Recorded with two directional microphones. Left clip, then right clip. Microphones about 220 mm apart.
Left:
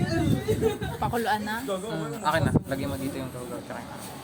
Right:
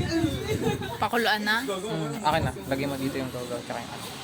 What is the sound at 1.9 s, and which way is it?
Speech, 20° right (ahead or behind).